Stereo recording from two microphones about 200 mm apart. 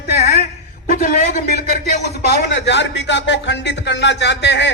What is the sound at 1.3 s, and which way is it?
Speech, 35° right (ahead or behind).